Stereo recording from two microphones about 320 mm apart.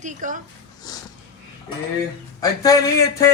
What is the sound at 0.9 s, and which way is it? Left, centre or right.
Speech, centre.